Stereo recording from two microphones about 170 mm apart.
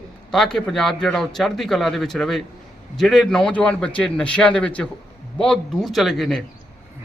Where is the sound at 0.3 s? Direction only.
Centre (ahead or behind).